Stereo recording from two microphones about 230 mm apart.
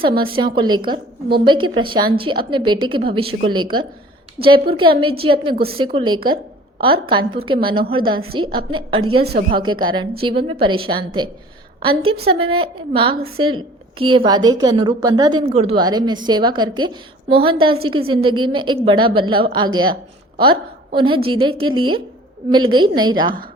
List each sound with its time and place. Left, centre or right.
0.3 s a woman's voice: right
6.2 s a sound: right
7.1 s a woman's voice: right
9.2 s speech: right
9.6 s a woman's voice: centre